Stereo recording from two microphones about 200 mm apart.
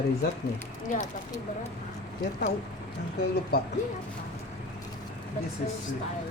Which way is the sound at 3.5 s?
50° left (ahead or behind).